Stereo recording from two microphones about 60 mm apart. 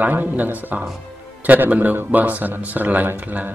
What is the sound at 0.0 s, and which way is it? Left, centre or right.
A man's voice, right.